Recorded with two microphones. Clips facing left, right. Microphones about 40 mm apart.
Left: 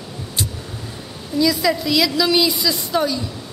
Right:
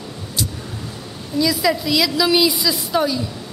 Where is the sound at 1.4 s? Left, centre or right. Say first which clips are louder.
Left 1 dB; centre.